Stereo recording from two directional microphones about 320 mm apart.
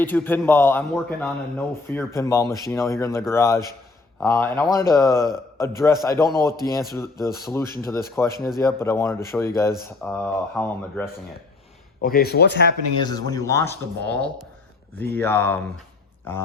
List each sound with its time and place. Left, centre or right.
0.0 s a man's voice: centre
12.0 s speech: left
13.0 s a man's voice: centre